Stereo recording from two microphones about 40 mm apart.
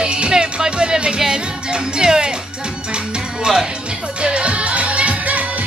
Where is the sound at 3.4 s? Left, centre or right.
Centre.